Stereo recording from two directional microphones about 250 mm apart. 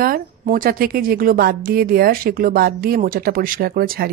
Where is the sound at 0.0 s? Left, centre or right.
Right.